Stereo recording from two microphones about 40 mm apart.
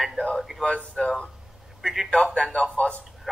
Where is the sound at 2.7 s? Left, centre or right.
Left.